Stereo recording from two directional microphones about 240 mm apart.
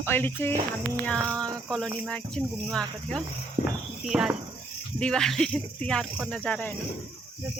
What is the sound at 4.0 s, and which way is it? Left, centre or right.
Speech, centre.